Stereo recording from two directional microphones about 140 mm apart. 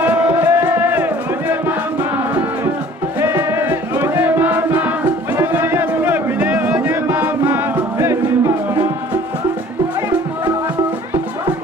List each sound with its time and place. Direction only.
0.0 s music: 10° right (ahead or behind)
3.2 s music: 15° right (ahead or behind)